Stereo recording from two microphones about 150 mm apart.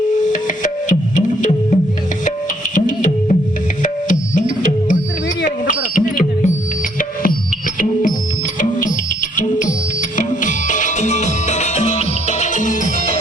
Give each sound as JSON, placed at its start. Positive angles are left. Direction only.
{"t": 0.3, "sound": "music", "side_deg": 60}
{"t": 5.5, "sound": "smoke detector", "side_deg": 60}
{"t": 7.0, "sound": "music", "side_deg": 70}
{"t": 9.3, "sound": "music", "side_deg": 60}